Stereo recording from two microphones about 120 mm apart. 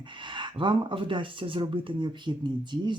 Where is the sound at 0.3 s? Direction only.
40° right (ahead or behind).